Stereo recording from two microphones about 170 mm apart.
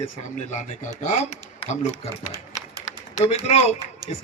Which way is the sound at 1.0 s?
45° left (ahead or behind).